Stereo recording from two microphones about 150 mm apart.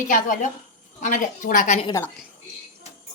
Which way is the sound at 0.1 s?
60° left (ahead or behind).